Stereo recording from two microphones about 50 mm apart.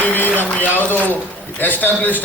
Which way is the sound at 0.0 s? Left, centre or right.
Left.